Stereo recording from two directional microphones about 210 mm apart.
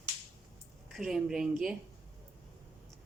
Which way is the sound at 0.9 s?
Centre (ahead or behind).